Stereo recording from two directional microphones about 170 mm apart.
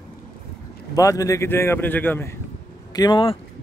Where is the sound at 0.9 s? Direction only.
20° left (ahead or behind).